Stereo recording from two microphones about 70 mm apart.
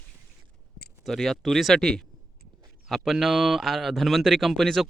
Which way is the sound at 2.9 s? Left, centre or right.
Centre.